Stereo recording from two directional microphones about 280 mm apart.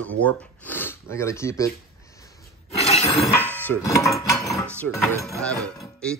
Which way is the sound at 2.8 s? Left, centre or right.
Left.